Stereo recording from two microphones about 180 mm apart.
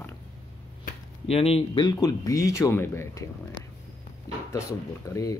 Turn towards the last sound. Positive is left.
turn(degrees=20)  # may be behind; listen again after turning